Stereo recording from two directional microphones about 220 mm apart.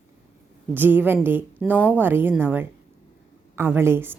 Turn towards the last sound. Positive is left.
turn(degrees=-10)  # may be behind; listen again after turning